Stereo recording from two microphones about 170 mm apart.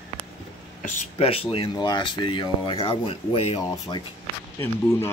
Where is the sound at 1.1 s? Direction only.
35° left (ahead or behind).